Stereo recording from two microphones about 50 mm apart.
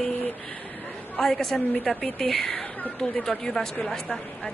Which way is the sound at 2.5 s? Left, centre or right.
Left.